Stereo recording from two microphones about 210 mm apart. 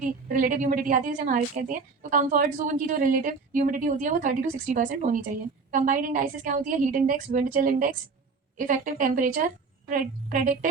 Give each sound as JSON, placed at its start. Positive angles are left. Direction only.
{"t": 0.0, "sound": "a woman's voice", "side_deg": -40}